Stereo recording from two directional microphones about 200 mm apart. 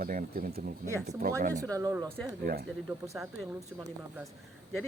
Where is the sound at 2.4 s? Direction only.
50° right (ahead or behind).